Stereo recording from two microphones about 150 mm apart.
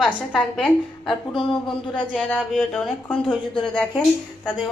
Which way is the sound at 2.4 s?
Centre (ahead or behind).